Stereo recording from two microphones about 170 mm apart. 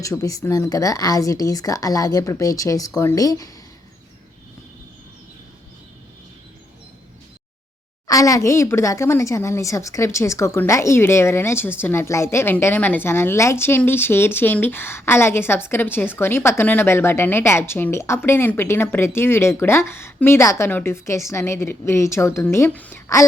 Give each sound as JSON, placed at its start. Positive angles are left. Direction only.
{"t": 0.0, "sound": "speech", "side_deg": 20}
{"t": 8.0, "sound": "a woman's voice", "side_deg": 20}